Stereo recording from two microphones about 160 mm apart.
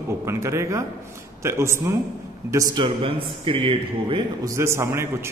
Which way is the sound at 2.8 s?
35° right (ahead or behind).